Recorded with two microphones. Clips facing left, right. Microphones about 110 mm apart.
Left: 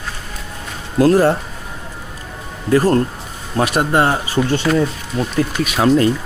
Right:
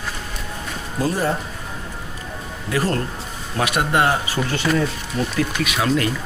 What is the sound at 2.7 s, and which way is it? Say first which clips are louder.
Speech: left 8 dB; 40° left (ahead or behind).